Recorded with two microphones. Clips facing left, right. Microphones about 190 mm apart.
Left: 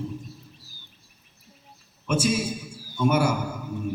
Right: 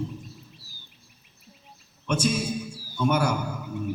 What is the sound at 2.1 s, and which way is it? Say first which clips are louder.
A man's voice: left 1 dB; 5° left (ahead or behind).